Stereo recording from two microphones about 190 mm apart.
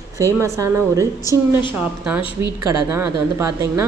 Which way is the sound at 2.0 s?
5° right (ahead or behind).